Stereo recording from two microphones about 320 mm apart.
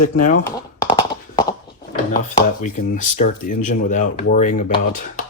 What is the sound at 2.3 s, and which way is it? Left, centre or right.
Speech, left.